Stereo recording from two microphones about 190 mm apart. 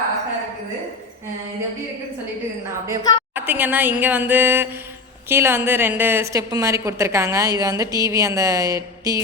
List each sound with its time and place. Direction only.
2.8 s a woman's voice: 15° right (ahead or behind)